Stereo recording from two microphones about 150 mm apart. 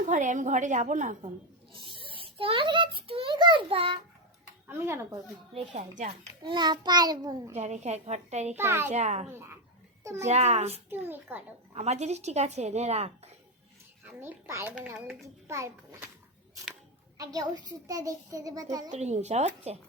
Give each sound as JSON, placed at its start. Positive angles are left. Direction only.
{"t": 0.0, "sound": "a woman's voice", "side_deg": -55}
{"t": 2.0, "sound": "a child's voice", "side_deg": -35}
{"t": 6.4, "sound": "a child's voice", "side_deg": -30}
{"t": 7.5, "sound": "a woman's voice", "side_deg": -50}
{"t": 8.5, "sound": "a child's voice", "side_deg": -15}
{"t": 8.9, "sound": "a woman's voice", "side_deg": -50}
{"t": 10.0, "sound": "a child's voice", "side_deg": -20}
{"t": 10.2, "sound": "a woman's voice", "side_deg": -45}
{"t": 10.8, "sound": "a child's voice", "side_deg": -15}
{"t": 11.7, "sound": "a woman's voice", "side_deg": -45}
{"t": 14.2, "sound": "a child's voice", "side_deg": -15}
{"t": 17.2, "sound": "a child's voice", "side_deg": -25}
{"t": 18.9, "sound": "a woman's voice", "side_deg": -50}